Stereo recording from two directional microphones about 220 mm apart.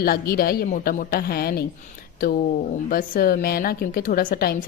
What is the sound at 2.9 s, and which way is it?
A woman's voice, 40° left (ahead or behind).